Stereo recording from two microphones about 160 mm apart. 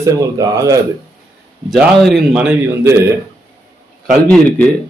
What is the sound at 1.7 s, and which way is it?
Speech, centre (ahead or behind).